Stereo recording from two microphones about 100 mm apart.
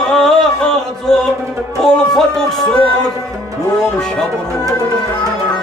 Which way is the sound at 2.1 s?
5° left (ahead or behind).